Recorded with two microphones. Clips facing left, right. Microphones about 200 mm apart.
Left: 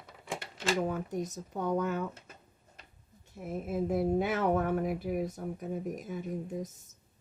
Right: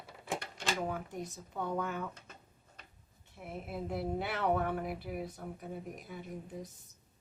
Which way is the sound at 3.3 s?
45° left (ahead or behind).